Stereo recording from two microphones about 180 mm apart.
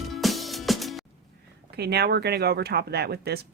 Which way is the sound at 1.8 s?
65° right (ahead or behind).